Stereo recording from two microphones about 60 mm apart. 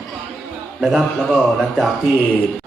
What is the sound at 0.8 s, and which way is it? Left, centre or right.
A man's voice, centre.